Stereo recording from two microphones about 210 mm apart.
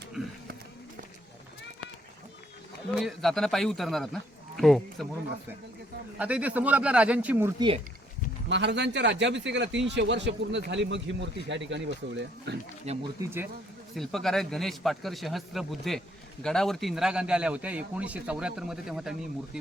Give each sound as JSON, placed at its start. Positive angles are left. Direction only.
{"t": 2.9, "sound": "a man's voice", "side_deg": 0}
{"t": 6.1, "sound": "speech", "side_deg": -5}
{"t": 8.4, "sound": "a man's voice", "side_deg": -60}
{"t": 12.8, "sound": "speech", "side_deg": -30}
{"t": 13.2, "sound": "speech", "side_deg": -10}
{"t": 13.9, "sound": "a man's voice", "side_deg": 0}